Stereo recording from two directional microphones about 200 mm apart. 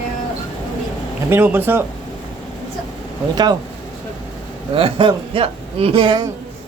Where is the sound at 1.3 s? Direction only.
10° right (ahead or behind).